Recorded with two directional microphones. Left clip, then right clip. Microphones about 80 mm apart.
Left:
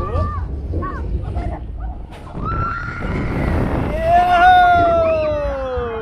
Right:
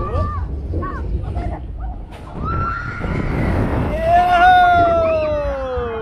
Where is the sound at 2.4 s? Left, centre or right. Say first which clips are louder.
Even; left.